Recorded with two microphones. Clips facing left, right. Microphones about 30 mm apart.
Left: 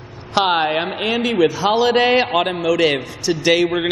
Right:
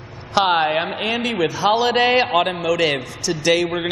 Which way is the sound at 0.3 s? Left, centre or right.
Centre.